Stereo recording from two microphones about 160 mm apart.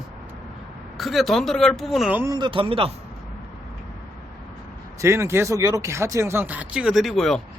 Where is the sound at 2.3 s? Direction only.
30° right (ahead or behind).